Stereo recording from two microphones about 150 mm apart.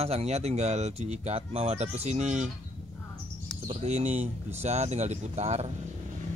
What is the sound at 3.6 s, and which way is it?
Speech, 45° right (ahead or behind).